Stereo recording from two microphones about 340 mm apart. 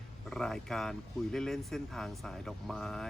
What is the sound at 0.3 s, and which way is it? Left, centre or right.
Speech, centre.